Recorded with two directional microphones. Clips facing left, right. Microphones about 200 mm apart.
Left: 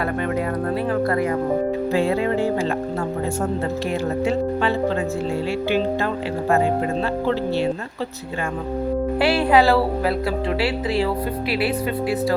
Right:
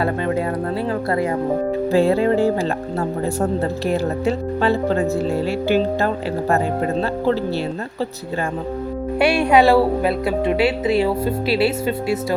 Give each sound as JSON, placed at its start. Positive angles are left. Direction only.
{"t": 1.9, "sound": "speech", "side_deg": -35}
{"t": 9.1, "sound": "speech", "side_deg": -20}